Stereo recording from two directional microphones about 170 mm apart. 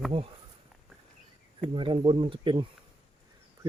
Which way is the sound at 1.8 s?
30° right (ahead or behind).